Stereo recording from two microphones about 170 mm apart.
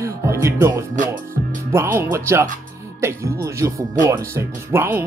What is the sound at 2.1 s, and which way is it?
Speech, 15° right (ahead or behind).